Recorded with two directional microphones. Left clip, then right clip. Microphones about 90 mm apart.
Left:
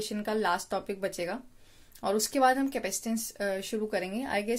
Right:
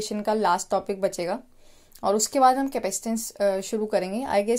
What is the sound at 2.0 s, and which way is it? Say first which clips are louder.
A woman's voice: right 6 dB; 40° right (ahead or behind).